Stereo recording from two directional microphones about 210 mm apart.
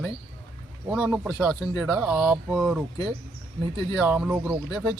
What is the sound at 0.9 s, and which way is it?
Speech, 5° right (ahead or behind).